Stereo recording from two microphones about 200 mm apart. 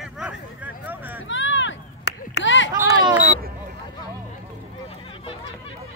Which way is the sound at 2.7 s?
20° right (ahead or behind).